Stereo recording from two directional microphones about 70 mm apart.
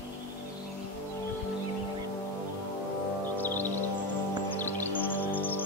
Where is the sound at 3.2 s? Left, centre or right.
Left.